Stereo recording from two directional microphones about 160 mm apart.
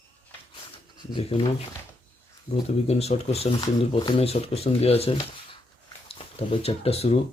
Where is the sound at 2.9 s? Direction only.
40° left (ahead or behind).